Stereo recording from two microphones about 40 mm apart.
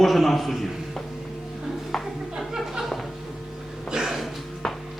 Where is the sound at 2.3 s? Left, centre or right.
Centre.